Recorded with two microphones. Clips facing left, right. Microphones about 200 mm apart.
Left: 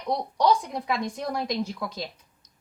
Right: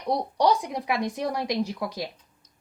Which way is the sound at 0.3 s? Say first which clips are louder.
Left 1 dB; 15° right (ahead or behind).